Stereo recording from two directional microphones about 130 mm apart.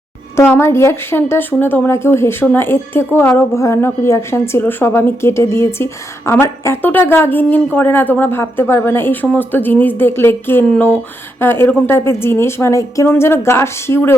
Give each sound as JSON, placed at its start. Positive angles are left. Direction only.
{"t": 0.3, "sound": "a woman's voice", "side_deg": 20}